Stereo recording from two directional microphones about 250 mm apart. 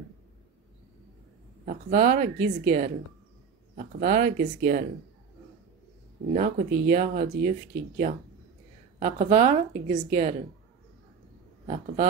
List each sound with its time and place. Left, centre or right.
1.7 s speech: right
6.3 s speech: right
9.0 s a woman's voice: right
11.6 s a woman's voice: right